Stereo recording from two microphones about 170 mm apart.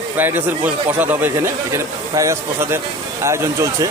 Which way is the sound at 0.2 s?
10° right (ahead or behind).